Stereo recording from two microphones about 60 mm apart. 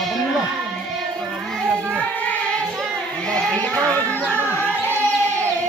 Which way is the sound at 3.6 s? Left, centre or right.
Centre.